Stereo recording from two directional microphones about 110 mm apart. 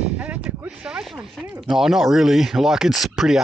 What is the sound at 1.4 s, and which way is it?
Speech, 5° right (ahead or behind).